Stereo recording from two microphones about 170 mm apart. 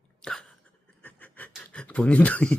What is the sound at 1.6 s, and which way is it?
Speech, 5° left (ahead or behind).